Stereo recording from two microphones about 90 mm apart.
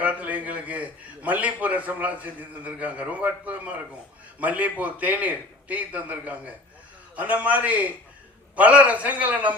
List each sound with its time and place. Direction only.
0.0 s a man's voice: 15° right (ahead or behind)